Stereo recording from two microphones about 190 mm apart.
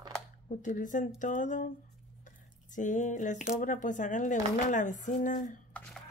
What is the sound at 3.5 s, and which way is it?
Speech, 40° left (ahead or behind).